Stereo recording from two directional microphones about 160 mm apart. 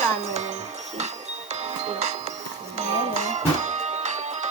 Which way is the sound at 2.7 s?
45° right (ahead or behind).